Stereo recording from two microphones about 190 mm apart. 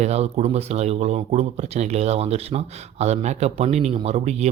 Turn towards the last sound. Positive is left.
turn(degrees=-35)  # may be behind; listen again after turning